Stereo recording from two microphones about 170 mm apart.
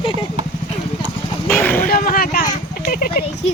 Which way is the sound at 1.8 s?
60° left (ahead or behind).